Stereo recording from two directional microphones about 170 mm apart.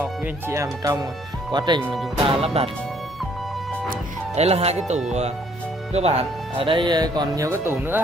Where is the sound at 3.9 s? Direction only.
40° right (ahead or behind).